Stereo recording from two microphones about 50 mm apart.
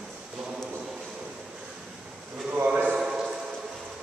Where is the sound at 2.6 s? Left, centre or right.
Right.